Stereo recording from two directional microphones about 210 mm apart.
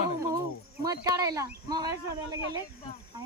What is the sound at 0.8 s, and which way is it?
Speech, 15° right (ahead or behind).